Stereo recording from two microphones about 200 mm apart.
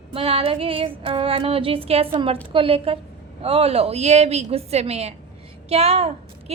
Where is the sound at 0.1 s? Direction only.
30° right (ahead or behind).